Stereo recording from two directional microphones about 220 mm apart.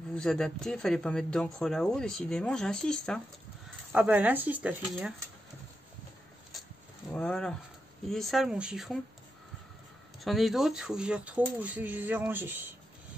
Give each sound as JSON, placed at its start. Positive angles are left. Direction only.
{"t": 0.1, "sound": "speech", "side_deg": 0}
{"t": 7.2, "sound": "speech", "side_deg": 5}
{"t": 10.2, "sound": "speech", "side_deg": 0}